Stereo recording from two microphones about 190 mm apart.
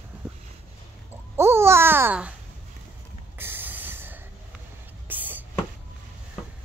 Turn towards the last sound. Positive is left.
turn(degrees=-10)  # may be behind; listen again after turning